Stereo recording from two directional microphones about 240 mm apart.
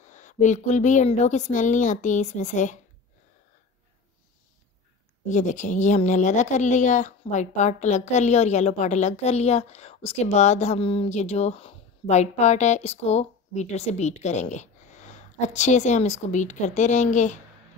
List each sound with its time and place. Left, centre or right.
0.0 s a woman's voice: left
5.3 s speech: left